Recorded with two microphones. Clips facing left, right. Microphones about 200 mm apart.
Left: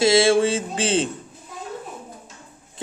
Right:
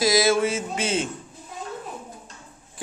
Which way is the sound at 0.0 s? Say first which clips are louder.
Left 4 dB; 25° left (ahead or behind).